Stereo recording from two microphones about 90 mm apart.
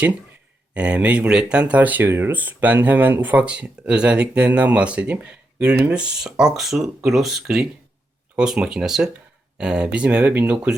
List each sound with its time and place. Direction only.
0.7 s speech: 15° right (ahead or behind)